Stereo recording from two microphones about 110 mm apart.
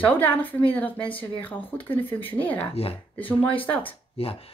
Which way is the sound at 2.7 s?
60° left (ahead or behind).